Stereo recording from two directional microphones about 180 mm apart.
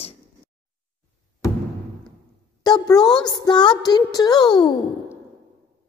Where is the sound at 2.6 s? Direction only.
20° left (ahead or behind).